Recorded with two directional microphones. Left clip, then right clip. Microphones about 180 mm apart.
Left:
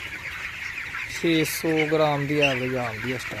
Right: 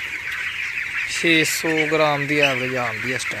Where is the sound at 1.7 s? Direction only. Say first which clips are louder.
Right 1 dB; 15° right (ahead or behind).